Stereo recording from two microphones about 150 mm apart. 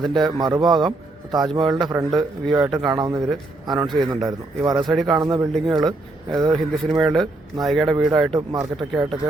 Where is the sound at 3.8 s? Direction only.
Centre (ahead or behind).